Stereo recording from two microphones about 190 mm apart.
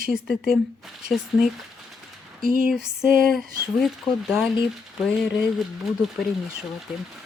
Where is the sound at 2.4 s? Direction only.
45° right (ahead or behind).